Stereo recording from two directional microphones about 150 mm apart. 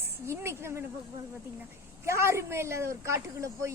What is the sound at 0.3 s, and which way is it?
Speech, 15° right (ahead or behind).